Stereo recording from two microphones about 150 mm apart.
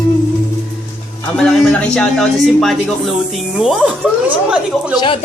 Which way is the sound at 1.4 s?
5° left (ahead or behind).